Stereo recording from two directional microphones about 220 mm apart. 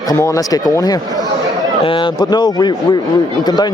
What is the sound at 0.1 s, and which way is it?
A man's voice, 15° left (ahead or behind).